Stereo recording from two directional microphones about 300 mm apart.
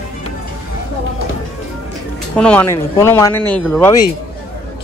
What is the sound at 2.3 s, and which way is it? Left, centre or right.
Speech, centre.